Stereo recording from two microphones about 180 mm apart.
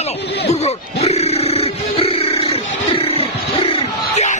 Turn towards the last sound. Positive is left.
turn(degrees=35)  # may be behind; listen again after turning